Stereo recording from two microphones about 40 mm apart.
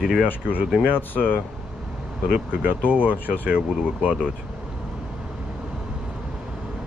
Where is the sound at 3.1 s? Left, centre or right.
Left.